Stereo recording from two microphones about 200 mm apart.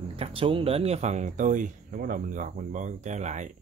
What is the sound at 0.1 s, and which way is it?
Speech, 30° right (ahead or behind).